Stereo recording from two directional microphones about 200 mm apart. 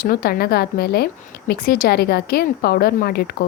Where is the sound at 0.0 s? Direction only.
50° left (ahead or behind).